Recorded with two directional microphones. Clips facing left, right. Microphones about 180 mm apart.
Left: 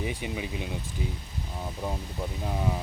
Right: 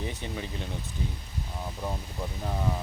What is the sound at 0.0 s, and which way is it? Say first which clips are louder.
Speech: left 3 dB; 10° left (ahead or behind).